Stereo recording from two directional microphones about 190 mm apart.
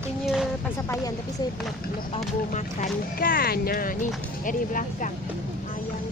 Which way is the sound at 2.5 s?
45° left (ahead or behind).